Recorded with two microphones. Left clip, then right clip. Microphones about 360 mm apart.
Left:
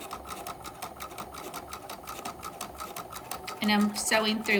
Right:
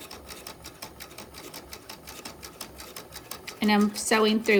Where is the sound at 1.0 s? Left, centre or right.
Left.